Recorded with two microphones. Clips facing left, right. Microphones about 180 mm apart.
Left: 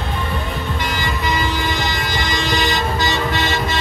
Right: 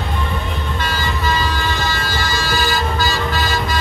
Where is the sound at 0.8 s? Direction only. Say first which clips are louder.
Right 2 dB; 15° left (ahead or behind).